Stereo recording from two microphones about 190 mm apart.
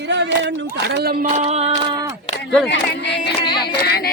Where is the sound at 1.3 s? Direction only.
35° right (ahead or behind).